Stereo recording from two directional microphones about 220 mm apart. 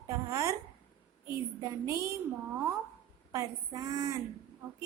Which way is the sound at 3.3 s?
15° right (ahead or behind).